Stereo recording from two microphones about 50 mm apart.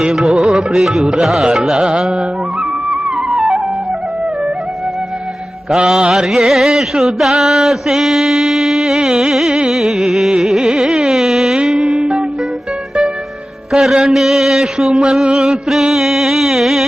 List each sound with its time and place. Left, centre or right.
0.0 s mantra: centre
1.5 s a sound: centre
5.7 s mantra: centre
9.6 s carnatic music: centre
11.6 s music: centre
11.9 s music: centre
13.7 s a sound: centre
15.1 s music: centre